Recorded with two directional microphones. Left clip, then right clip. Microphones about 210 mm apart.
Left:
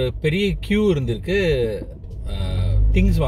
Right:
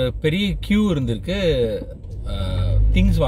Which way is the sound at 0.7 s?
Centre (ahead or behind).